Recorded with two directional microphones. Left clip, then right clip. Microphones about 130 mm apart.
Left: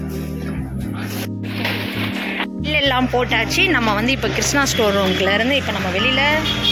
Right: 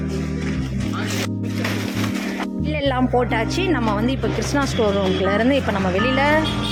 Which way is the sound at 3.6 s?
15° right (ahead or behind).